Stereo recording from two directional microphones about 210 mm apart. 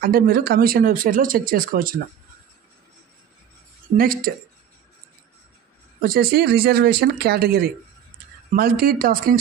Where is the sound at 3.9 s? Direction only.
45° right (ahead or behind).